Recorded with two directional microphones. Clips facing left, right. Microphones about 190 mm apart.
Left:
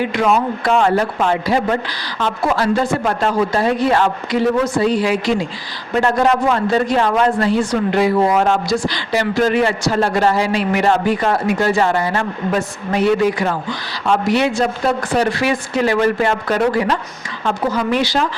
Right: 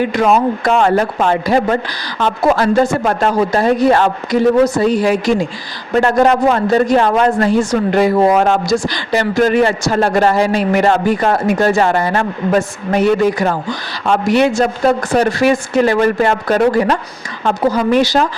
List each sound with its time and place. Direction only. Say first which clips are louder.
0.1 s a man's voice: right 3 dB; 40° right (ahead or behind)